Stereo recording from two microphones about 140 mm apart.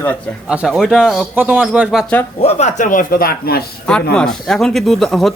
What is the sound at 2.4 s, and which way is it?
Speech, 55° left (ahead or behind).